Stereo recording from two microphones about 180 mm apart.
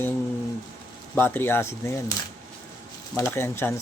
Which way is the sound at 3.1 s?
15° left (ahead or behind).